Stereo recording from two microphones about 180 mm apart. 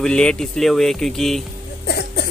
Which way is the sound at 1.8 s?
60° left (ahead or behind).